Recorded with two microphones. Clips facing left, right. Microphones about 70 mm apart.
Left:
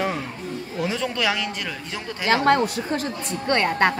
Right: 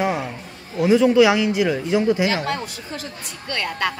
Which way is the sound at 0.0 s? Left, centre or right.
Centre.